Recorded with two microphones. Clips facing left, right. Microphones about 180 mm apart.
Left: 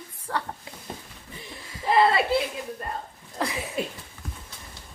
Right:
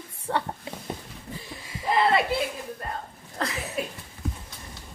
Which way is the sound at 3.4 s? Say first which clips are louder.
Left 2 dB; 15° left (ahead or behind).